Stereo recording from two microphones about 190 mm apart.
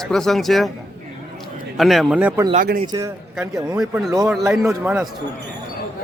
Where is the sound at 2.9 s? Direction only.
15° right (ahead or behind).